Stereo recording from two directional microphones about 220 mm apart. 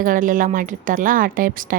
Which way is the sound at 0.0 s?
40° right (ahead or behind).